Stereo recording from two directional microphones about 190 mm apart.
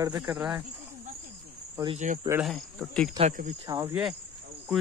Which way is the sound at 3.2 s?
40° right (ahead or behind).